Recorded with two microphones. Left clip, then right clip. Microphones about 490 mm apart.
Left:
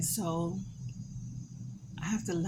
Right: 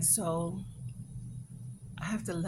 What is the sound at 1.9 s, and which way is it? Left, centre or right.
Speech, right.